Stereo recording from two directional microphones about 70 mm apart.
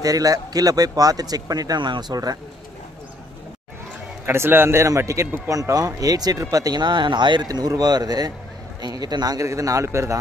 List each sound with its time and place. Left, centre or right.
0.0 s speech: right
4.3 s a man's voice: right
6.5 s speech: right
8.8 s speech: right
9.5 s a man's voice: right